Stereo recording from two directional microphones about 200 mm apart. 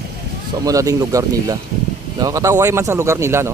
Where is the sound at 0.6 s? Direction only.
15° right (ahead or behind).